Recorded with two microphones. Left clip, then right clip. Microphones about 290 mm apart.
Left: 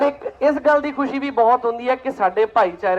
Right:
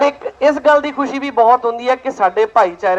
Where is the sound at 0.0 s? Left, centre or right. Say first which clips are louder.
Right 4 dB; right.